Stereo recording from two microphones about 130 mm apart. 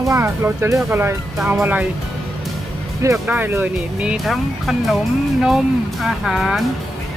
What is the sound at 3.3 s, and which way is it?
Speech, 15° right (ahead or behind).